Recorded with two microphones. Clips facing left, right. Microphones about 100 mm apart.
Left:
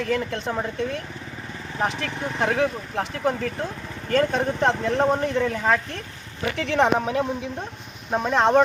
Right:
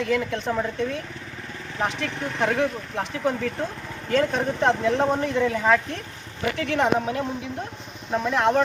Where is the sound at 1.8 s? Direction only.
Centre (ahead or behind).